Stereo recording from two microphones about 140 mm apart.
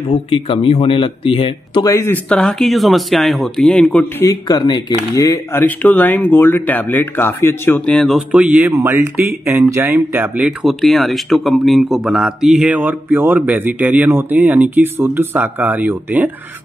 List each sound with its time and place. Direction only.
0.1 s speech: 40° left (ahead or behind); by 4.3 s 10° left (ahead or behind)
4.3 s speech: 30° left (ahead or behind); by 8.2 s 5° left (ahead or behind)
8.3 s speech: 10° right (ahead or behind)